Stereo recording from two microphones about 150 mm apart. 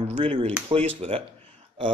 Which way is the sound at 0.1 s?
40° right (ahead or behind).